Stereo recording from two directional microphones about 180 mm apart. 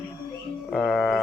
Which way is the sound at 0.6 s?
Centre (ahead or behind).